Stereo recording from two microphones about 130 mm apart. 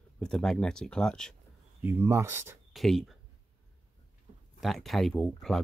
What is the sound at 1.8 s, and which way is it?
Speech, 20° right (ahead or behind).